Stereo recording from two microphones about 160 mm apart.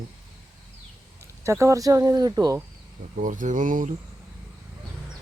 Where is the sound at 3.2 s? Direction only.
55° right (ahead or behind).